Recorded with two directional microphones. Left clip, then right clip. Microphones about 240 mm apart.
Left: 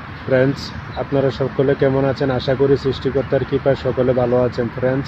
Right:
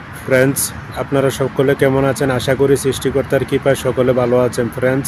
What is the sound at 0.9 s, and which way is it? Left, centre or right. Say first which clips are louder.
Speech: right 3 dB; right.